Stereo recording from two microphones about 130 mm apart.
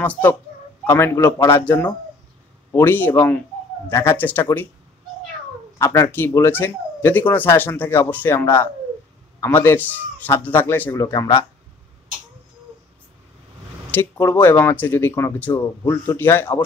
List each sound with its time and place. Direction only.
0.0 s a man's voice: 15° left (ahead or behind)
5.8 s a man's voice: 20° left (ahead or behind)
11.0 s a man's voice: 30° left (ahead or behind)
13.9 s speech: 15° left (ahead or behind)